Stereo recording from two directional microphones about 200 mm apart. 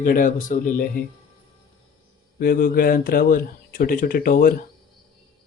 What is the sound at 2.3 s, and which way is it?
Speech, 45° left (ahead or behind).